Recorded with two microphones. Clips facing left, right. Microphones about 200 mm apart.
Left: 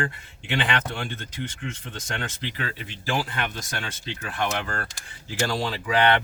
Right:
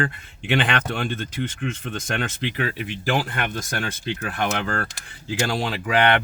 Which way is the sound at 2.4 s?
60° right (ahead or behind).